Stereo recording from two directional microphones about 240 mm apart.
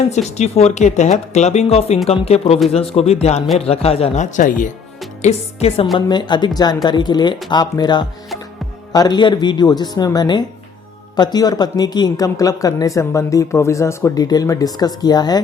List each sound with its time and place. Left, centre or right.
0.1 s speech: left